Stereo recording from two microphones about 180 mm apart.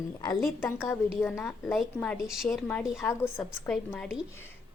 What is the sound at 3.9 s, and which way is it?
Speech, centre (ahead or behind).